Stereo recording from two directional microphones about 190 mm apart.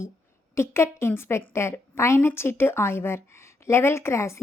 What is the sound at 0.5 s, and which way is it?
A woman's voice, 15° left (ahead or behind).